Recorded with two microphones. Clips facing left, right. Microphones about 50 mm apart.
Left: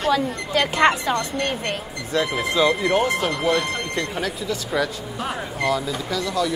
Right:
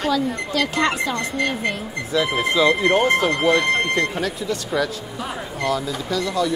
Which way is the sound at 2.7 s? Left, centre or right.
Right.